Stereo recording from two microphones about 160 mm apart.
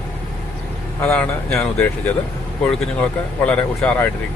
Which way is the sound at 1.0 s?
10° left (ahead or behind).